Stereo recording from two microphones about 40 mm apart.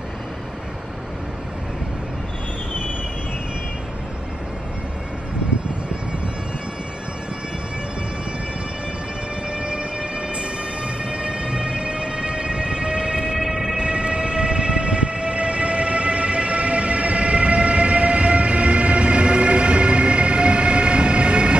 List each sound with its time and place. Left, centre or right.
9.5 s train: right